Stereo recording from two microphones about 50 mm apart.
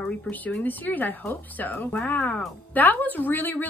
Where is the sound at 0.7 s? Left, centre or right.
Left.